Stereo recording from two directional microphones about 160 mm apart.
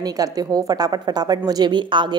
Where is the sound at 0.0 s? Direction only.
25° right (ahead or behind).